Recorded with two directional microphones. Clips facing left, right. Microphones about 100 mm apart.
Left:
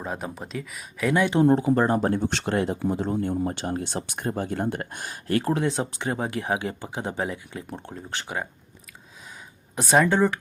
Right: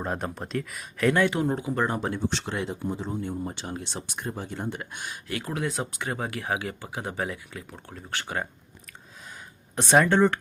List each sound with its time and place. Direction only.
0.0 s speech: centre (ahead or behind)
1.4 s speech: 35° left (ahead or behind)
2.3 s speech: 60° left (ahead or behind)
2.7 s speech: 65° left (ahead or behind); by 8.4 s 20° left (ahead or behind)
9.7 s speech: 5° left (ahead or behind)